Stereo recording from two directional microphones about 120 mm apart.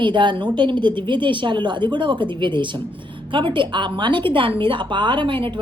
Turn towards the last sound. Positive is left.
turn(degrees=-45)  # may be behind; listen again after turning